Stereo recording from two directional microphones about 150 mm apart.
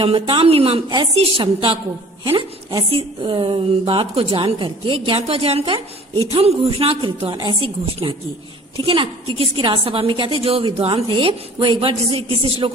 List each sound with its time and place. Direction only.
0.0 s a woman's voice: 35° right (ahead or behind)